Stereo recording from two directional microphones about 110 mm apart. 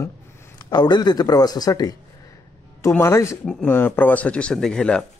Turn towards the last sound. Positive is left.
turn(degrees=5)  # may be behind; listen again after turning